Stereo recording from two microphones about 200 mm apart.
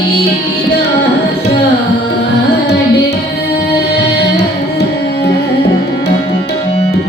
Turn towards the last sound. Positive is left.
turn(degrees=55)  # may be behind; listen again after turning